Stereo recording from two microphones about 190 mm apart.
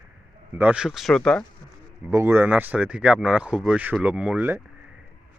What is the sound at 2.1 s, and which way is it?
A man's voice, 15° right (ahead or behind).